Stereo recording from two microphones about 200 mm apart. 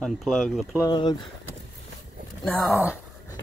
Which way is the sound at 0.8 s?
20° left (ahead or behind).